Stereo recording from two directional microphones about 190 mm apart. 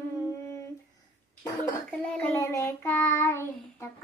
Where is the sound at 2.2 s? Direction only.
15° left (ahead or behind).